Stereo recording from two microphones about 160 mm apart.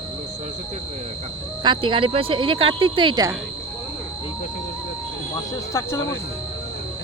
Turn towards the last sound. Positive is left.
turn(degrees=15)  # may be behind; listen again after turning